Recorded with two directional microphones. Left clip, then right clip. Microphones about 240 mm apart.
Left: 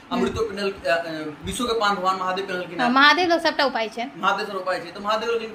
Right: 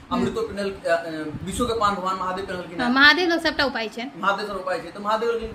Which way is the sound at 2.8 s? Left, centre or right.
Right.